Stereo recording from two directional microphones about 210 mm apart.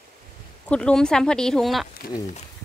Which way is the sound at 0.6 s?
5° left (ahead or behind).